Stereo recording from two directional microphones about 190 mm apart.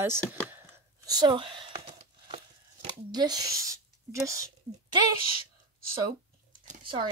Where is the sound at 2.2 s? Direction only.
30° right (ahead or behind).